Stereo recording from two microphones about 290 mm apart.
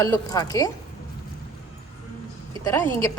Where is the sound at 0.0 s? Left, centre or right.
Centre.